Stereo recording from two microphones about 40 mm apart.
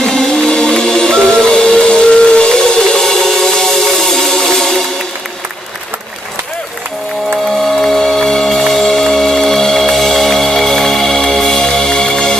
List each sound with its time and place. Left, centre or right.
0.0 s music: centre
1.3 s steam whistle: centre
7.6 s music: centre